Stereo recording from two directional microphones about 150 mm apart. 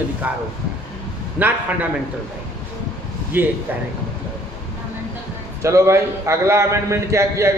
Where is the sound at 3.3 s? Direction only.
15° right (ahead or behind).